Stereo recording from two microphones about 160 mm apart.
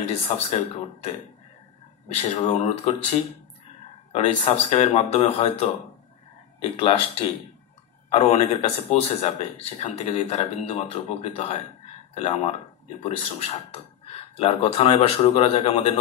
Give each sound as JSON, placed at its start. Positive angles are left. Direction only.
{"t": 0.0, "sound": "a man's voice", "side_deg": 40}
{"t": 2.2, "sound": "speech", "side_deg": 45}
{"t": 4.1, "sound": "a man's voice", "side_deg": 40}